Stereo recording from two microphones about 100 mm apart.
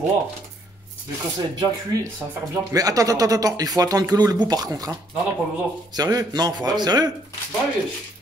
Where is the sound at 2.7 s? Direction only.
35° right (ahead or behind).